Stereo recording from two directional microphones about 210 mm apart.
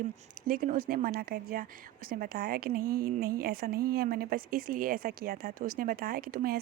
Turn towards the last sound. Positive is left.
turn(degrees=-45)  # may be behind; listen again after turning